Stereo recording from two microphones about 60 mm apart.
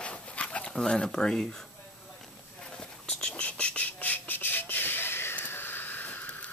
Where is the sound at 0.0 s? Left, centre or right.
Left.